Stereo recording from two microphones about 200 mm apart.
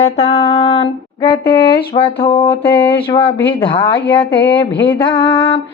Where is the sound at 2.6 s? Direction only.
10° left (ahead or behind).